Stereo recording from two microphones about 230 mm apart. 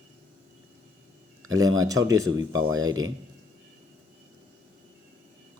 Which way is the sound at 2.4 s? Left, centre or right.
Right.